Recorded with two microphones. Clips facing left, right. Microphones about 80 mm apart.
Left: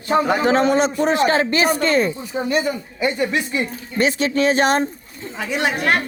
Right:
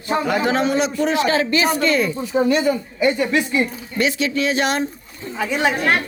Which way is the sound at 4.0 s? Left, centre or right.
Left.